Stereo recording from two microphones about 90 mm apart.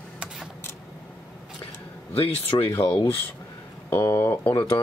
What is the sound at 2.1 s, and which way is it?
Speech, 90° left.